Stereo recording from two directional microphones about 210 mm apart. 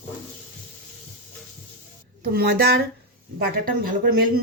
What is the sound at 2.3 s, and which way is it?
Speech, 50° right (ahead or behind).